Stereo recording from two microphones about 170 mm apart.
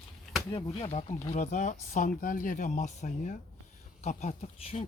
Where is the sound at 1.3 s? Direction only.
45° left (ahead or behind).